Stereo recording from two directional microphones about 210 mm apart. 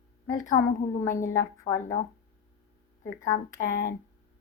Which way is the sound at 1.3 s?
15° left (ahead or behind).